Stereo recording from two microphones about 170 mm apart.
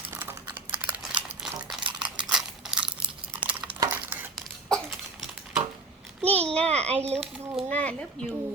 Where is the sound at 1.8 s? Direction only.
25° right (ahead or behind).